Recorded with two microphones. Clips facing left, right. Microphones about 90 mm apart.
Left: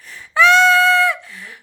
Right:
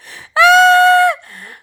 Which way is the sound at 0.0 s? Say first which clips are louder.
Right 3 dB; 75° right (ahead or behind).